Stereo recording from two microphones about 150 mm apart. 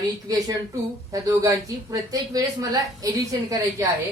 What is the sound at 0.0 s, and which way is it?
A woman's voice, 25° right (ahead or behind).